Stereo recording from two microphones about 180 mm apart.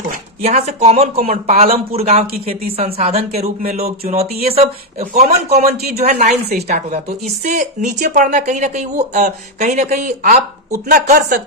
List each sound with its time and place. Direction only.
0.4 s speech: 35° right (ahead or behind)
5.7 s speech: 60° right (ahead or behind)
6.1 s a woman's voice: 40° right (ahead or behind)